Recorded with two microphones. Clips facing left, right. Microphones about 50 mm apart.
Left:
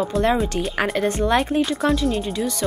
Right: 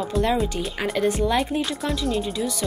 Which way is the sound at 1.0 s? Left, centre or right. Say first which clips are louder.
Right 1 dB; left.